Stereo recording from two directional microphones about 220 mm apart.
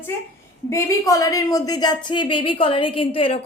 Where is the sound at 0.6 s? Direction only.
15° left (ahead or behind).